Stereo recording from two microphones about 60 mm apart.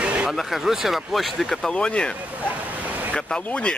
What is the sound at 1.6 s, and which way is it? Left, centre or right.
Speech, centre.